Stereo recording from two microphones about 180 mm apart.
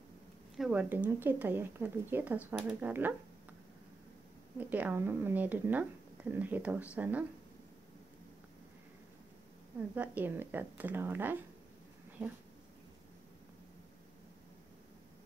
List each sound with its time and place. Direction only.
0.6 s speech: 5° right (ahead or behind)
4.6 s speech: 10° right (ahead or behind)
9.9 s speech: 10° right (ahead or behind)